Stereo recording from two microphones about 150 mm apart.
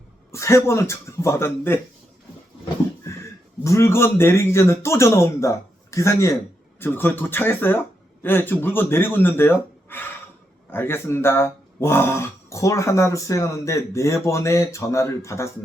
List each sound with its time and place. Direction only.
0.3 s speech: 20° left (ahead or behind)
3.6 s speech: 20° left (ahead or behind)